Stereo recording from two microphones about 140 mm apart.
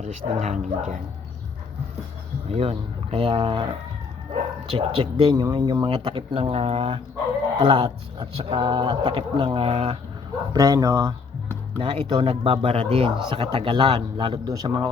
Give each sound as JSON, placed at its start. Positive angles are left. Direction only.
{"t": 0.0, "sound": "speech", "side_deg": -55}
{"t": 2.5, "sound": "speech", "side_deg": -45}
{"t": 4.7, "sound": "speech", "side_deg": -40}
{"t": 10.5, "sound": "speech", "side_deg": -25}
{"t": 11.8, "sound": "speech", "side_deg": -40}